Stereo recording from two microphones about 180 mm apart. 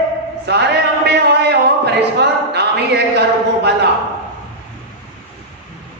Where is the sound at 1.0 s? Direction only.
70° right (ahead or behind).